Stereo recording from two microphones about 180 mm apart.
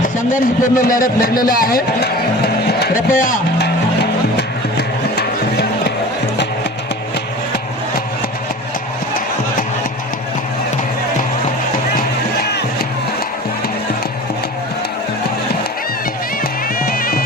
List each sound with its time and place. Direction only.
0.2 s a man's voice: 50° left (ahead or behind)
5.1 s music: 65° left (ahead or behind)
16.8 s music: 55° left (ahead or behind)